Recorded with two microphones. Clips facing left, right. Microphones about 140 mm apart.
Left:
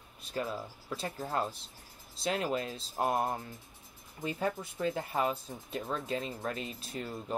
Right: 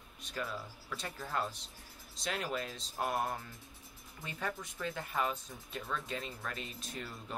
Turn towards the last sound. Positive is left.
turn(degrees=35)  # may be behind; listen again after turning